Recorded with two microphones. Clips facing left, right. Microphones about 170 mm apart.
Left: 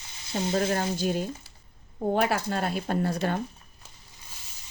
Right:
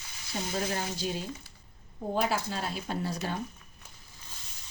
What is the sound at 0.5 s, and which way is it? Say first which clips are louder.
Speech: left 7 dB; 50° left (ahead or behind).